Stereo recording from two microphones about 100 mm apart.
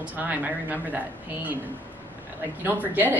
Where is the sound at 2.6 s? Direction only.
20° right (ahead or behind).